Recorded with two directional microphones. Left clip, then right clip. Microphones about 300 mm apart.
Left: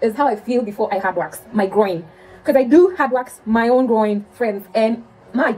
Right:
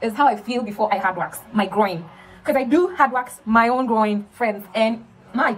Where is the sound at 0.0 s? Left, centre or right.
Centre.